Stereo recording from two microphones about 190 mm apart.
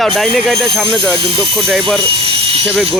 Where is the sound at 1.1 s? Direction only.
30° right (ahead or behind).